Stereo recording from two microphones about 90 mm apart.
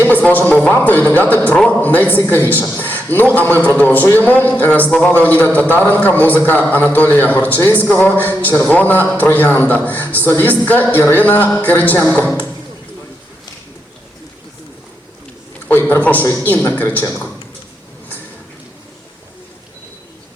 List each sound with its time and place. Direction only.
0.0 s a man's voice: 20° left (ahead or behind)
15.7 s a man's voice: 20° left (ahead or behind)